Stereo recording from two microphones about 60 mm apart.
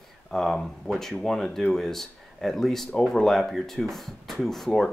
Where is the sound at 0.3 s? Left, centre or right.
Centre.